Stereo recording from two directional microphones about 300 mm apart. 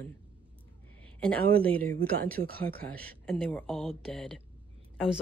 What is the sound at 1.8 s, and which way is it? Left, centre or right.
Speech, right.